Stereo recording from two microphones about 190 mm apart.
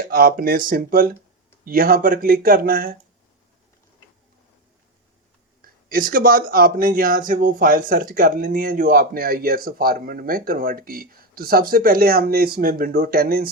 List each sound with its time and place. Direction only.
0.0 s speech: 50° right (ahead or behind)
5.6 s speech: 50° right (ahead or behind)